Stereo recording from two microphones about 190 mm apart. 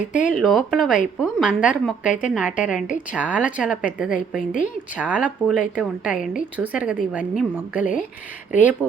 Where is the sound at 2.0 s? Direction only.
40° left (ahead or behind).